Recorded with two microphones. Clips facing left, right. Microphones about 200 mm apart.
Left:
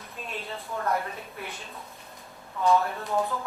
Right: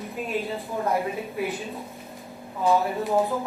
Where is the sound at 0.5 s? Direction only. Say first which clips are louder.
Right 3 dB; 15° right (ahead or behind).